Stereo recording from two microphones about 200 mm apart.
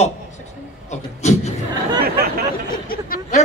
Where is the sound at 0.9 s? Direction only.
35° left (ahead or behind).